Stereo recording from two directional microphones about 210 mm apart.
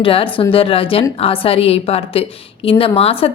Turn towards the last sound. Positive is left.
turn(degrees=30)  # may be behind; listen again after turning